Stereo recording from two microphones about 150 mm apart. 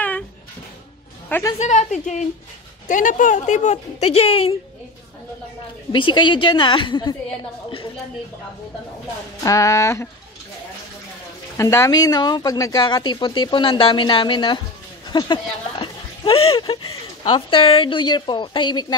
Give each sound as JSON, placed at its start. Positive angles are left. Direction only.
{"t": 1.6, "sound": "a woman's voice", "side_deg": 50}
{"t": 5.9, "sound": "a woman's voice", "side_deg": 35}
{"t": 9.4, "sound": "speech", "side_deg": 20}
{"t": 11.5, "sound": "speech", "side_deg": 20}